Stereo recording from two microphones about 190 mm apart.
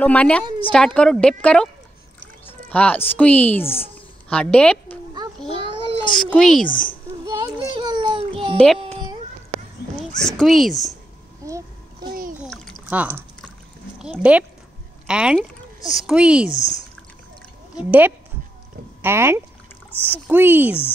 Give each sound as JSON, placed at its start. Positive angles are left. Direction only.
{"t": 0.0, "sound": "a woman's voice", "side_deg": 5}
{"t": 6.3, "sound": "a woman's voice", "side_deg": 0}
{"t": 6.6, "sound": "a child's voice", "side_deg": 45}
{"t": 7.2, "sound": "a sound", "side_deg": -20}
{"t": 8.7, "sound": "music", "side_deg": -30}
{"t": 10.2, "sound": "a woman's voice", "side_deg": 0}
{"t": 11.4, "sound": "a sound", "side_deg": -15}
{"t": 12.1, "sound": "a sound", "side_deg": -45}
{"t": 12.4, "sound": "a sound", "side_deg": 5}
{"t": 12.8, "sound": "a woman's voice", "side_deg": -10}
{"t": 16.4, "sound": "speech", "side_deg": 35}
{"t": 17.7, "sound": "speech", "side_deg": -10}
{"t": 19.9, "sound": "speech", "side_deg": 10}
{"t": 20.2, "sound": "speech", "side_deg": -10}